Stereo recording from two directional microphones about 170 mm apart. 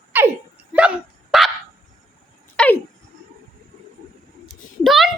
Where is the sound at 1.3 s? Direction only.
Centre (ahead or behind).